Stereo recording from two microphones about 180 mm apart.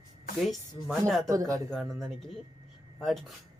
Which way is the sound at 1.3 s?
20° right (ahead or behind).